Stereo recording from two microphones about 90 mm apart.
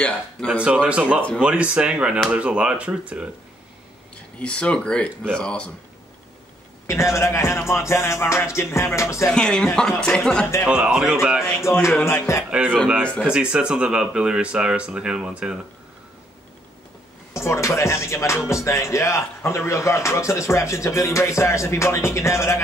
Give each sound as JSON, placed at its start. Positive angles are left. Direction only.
{"t": 0.0, "sound": "speech", "side_deg": 10}
{"t": 0.6, "sound": "speech", "side_deg": -15}
{"t": 4.4, "sound": "speech", "side_deg": 10}
{"t": 6.9, "sound": "speech", "side_deg": 30}
{"t": 9.3, "sound": "speech", "side_deg": 10}
{"t": 10.7, "sound": "speech", "side_deg": -10}
{"t": 11.6, "sound": "speech", "side_deg": 30}
{"t": 12.4, "sound": "speech", "side_deg": -15}
{"t": 17.3, "sound": "speech", "side_deg": 30}